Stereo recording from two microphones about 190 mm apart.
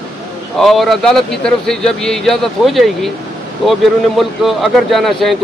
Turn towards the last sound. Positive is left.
turn(degrees=0)  # may be behind; listen again after turning